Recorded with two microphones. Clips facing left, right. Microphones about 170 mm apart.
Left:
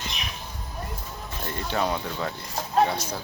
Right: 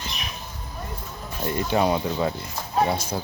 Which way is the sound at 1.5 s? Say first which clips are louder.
Right 5 dB; 15° right (ahead or behind).